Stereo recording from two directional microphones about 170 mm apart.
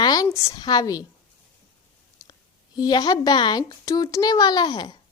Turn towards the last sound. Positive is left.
turn(degrees=25)  # may be behind; listen again after turning